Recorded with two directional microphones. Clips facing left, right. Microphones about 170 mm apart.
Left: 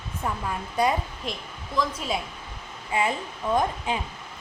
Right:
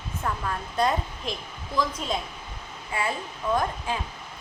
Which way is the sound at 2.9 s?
20° left (ahead or behind).